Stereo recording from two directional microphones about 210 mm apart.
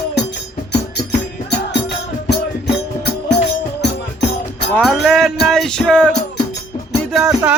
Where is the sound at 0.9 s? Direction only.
55° left (ahead or behind).